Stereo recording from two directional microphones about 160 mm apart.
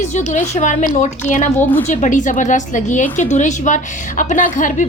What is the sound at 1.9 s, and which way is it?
A woman's voice, 50° left (ahead or behind).